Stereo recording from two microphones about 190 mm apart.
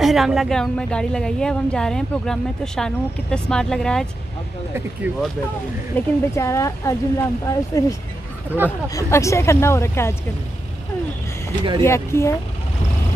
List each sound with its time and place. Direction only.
0.0 s a woman's voice: centre (ahead or behind)
5.1 s speech: 10° right (ahead or behind)
5.9 s speech: 15° left (ahead or behind)
11.8 s speech: 15° left (ahead or behind)